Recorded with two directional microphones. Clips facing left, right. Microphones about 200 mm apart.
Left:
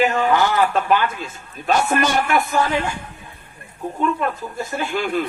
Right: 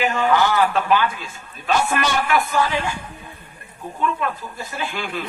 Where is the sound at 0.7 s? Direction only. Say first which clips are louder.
Left 1 dB; 45° left (ahead or behind).